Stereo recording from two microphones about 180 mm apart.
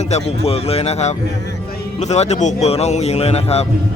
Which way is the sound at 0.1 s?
35° left (ahead or behind).